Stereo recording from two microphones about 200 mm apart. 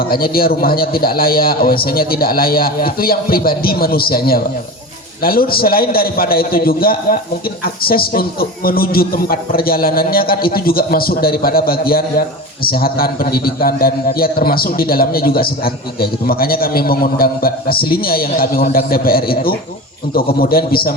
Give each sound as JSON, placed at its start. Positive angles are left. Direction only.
{"t": 0.0, "sound": "a man's voice", "side_deg": 50}